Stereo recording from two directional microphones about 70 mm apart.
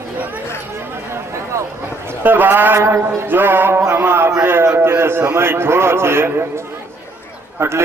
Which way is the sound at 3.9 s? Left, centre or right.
Right.